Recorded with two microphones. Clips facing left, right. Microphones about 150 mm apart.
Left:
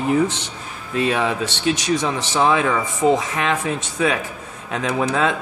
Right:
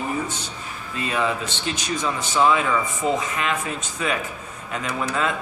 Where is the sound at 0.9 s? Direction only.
80° left.